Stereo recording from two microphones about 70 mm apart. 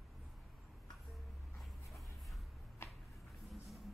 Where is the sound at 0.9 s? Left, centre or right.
Centre.